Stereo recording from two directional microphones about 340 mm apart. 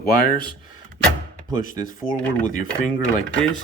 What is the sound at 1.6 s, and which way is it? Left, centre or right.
Speech, left.